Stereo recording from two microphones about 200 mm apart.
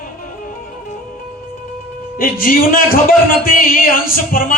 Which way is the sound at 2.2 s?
45° left (ahead or behind).